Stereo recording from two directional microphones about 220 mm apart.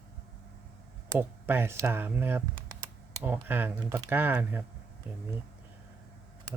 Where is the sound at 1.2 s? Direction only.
10° right (ahead or behind).